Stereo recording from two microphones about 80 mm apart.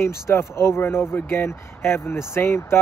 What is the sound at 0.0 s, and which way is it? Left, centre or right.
Speech, left.